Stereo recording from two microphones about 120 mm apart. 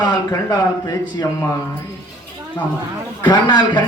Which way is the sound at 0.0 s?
35° left (ahead or behind).